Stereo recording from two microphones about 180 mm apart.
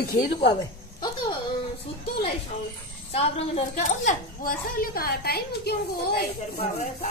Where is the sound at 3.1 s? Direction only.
35° left (ahead or behind).